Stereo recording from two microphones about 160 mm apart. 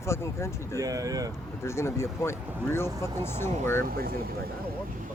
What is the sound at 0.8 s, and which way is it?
Speech, 20° right (ahead or behind).